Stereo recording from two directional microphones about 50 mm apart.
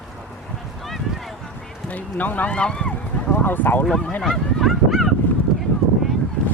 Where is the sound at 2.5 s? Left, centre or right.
Centre.